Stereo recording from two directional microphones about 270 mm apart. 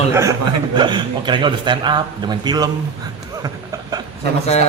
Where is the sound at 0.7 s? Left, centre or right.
Centre.